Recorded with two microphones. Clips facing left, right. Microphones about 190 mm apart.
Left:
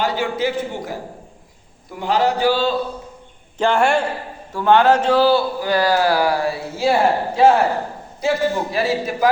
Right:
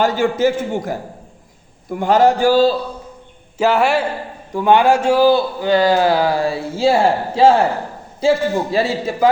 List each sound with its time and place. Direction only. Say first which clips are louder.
0.0 s a man's voice: right 5 dB; 45° right (ahead or behind)
2.0 s a man's voice: right 5 dB; 45° right (ahead or behind)
3.6 s a man's voice: right 2 dB; 5° right (ahead or behind)
4.5 s a man's voice: right 1 dB; 15° right (ahead or behind)
5.5 s speech: right 3 dB; 25° right (ahead or behind)